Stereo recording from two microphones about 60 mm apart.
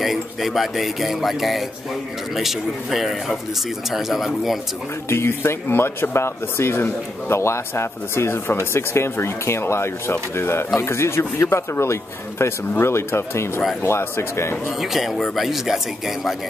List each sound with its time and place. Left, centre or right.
0.0 s speech: centre
5.1 s speech: left
14.8 s speech: centre